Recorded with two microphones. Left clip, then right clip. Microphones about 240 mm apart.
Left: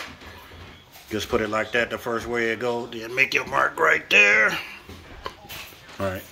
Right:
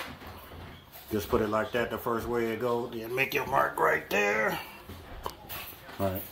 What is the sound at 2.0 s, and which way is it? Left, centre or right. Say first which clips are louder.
Speech: left 4 dB; centre.